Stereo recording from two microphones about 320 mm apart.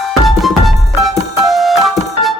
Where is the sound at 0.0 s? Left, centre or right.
Centre.